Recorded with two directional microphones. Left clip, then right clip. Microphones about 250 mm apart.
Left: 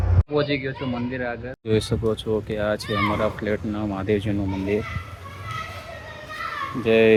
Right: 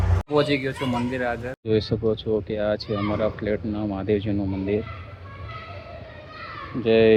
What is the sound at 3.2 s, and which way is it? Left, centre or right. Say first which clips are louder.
Speech: left 1 dB; centre.